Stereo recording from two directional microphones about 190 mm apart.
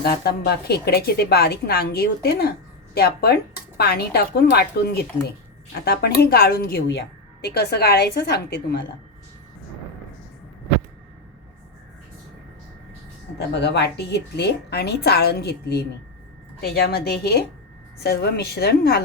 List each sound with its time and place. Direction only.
0.0 s a woman's voice: 55° left (ahead or behind)
13.5 s a woman's voice: 60° left (ahead or behind)